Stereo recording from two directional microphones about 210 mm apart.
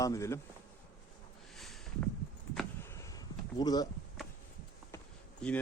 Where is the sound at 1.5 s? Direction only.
Centre (ahead or behind).